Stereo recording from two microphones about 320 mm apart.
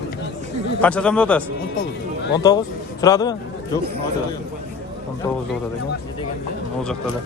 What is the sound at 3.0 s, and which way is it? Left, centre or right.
Speech, centre.